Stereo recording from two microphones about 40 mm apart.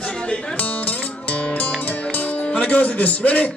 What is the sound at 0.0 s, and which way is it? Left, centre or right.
Music, left.